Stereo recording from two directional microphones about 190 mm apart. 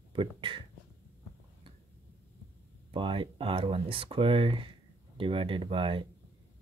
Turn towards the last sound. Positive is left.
turn(degrees=-25)  # may be behind; listen again after turning